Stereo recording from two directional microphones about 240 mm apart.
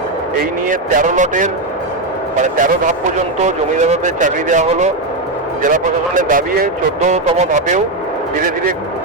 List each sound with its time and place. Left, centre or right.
0.7 s speech: right